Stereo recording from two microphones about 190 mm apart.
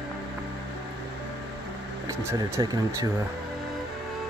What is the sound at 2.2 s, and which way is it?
Speech, 15° right (ahead or behind).